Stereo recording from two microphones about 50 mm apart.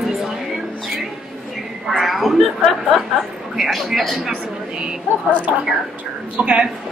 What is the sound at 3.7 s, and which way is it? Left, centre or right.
Speech, centre.